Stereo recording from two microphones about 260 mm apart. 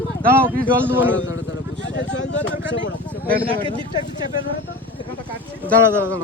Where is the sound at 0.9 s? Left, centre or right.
Centre.